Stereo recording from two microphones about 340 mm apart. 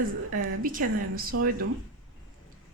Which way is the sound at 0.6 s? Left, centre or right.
Right.